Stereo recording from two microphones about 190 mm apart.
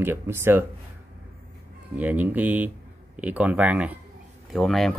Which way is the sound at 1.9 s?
10° right (ahead or behind).